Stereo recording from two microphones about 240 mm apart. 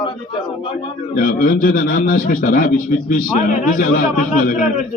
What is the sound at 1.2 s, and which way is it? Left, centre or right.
A man's voice, left.